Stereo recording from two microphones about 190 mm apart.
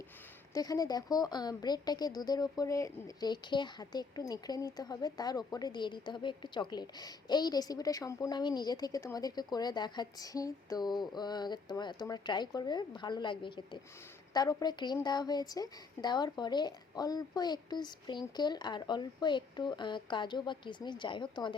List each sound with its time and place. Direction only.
0.5 s speech: 20° left (ahead or behind)